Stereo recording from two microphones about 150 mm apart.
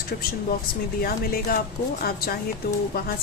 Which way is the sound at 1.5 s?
80° left.